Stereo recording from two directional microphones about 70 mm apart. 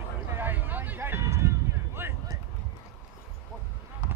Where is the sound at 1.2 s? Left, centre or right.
Right.